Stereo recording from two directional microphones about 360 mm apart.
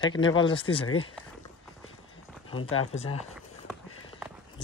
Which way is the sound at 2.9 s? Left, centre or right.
Centre.